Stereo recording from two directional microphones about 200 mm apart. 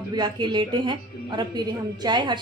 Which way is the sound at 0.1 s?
20° right (ahead or behind).